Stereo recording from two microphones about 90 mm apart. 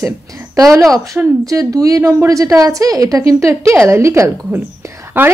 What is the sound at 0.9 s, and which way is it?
A woman's voice, 40° right (ahead or behind).